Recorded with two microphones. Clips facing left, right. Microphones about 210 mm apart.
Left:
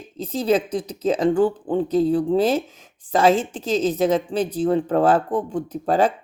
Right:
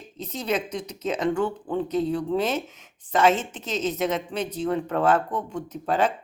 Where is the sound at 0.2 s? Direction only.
30° left (ahead or behind).